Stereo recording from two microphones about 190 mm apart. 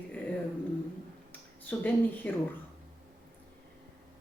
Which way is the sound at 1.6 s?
10° left (ahead or behind).